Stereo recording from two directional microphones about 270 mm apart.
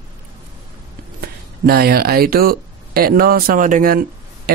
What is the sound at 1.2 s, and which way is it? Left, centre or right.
Speech, right.